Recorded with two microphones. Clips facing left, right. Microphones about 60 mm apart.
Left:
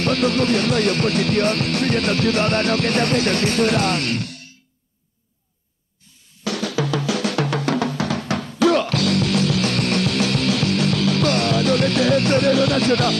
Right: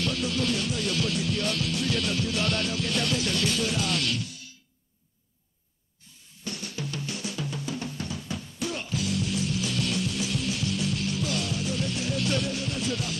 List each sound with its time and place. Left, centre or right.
0.0 s music: left
6.4 s drum: left